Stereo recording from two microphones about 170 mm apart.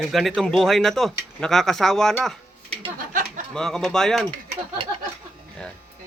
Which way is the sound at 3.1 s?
55° right (ahead or behind).